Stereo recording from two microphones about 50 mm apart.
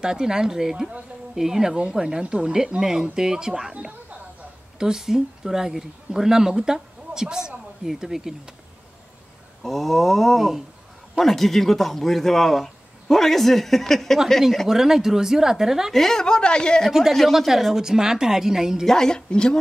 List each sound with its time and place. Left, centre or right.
0.0 s speech: centre
4.7 s speech: centre
9.6 s speech: centre
14.7 s speech: centre
15.9 s a woman's voice: centre
17.1 s speech: centre
18.9 s a woman's voice: centre